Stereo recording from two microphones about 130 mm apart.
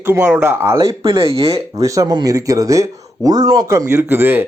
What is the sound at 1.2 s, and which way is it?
Speech, 45° right (ahead or behind).